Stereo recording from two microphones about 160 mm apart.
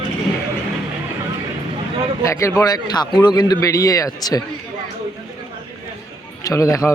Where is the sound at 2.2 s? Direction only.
20° left (ahead or behind).